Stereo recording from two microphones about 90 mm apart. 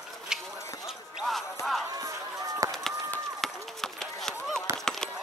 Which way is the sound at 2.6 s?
40° right (ahead or behind).